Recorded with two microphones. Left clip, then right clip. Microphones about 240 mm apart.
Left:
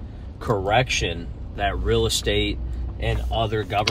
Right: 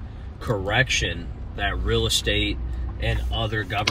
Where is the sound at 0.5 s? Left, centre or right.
Centre.